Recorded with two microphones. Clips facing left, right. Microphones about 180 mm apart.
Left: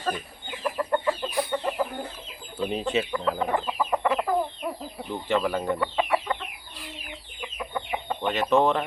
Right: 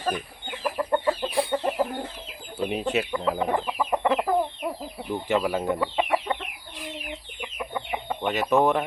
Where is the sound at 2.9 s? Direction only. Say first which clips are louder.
Even; 10° right (ahead or behind).